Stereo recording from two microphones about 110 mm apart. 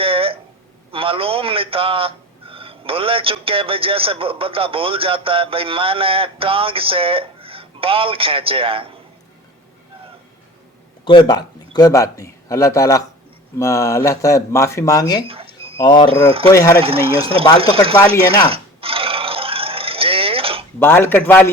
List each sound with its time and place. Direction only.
0.0 s a sound: 55° right (ahead or behind)
0.9 s a man's voice: 55° right (ahead or behind)
11.0 s speech: 45° left (ahead or behind)
15.3 s a sound: 60° right (ahead or behind)
15.8 s speech: 45° left (ahead or behind)
16.0 s a man's voice: 60° right (ahead or behind)
16.5 s speech: 30° left (ahead or behind)
16.8 s a man's voice: 55° right (ahead or behind)
18.4 s a sound: 60° right (ahead or behind)
20.7 s speech: 20° left (ahead or behind)